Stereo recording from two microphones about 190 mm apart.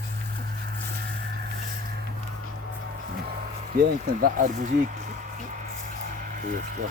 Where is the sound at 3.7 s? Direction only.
50° right (ahead or behind).